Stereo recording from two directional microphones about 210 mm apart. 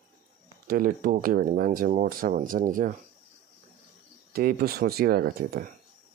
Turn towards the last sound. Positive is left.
turn(degrees=-45)  # may be behind; listen again after turning